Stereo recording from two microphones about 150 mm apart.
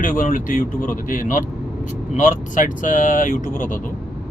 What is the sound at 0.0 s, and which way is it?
Speech, 60° left (ahead or behind).